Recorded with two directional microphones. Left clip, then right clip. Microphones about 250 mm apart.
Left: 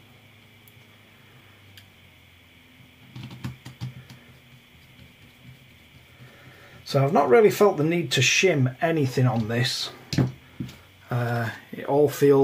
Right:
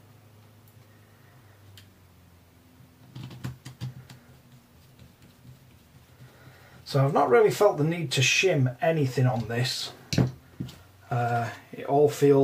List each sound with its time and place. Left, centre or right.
6.8 s speech: left
11.1 s speech: left